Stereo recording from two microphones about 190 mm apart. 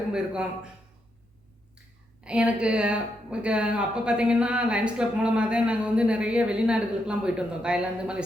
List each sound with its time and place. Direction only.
0.1 s speech: 5° right (ahead or behind)
2.2 s speech: 5° right (ahead or behind)